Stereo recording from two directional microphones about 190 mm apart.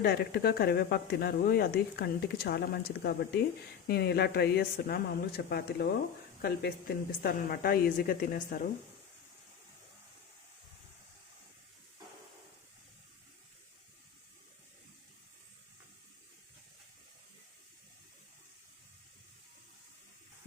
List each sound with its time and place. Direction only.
0.0 s a woman's voice: 55° left (ahead or behind)